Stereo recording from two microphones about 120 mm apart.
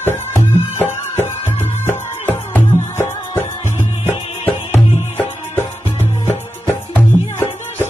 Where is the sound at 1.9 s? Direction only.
20° left (ahead or behind).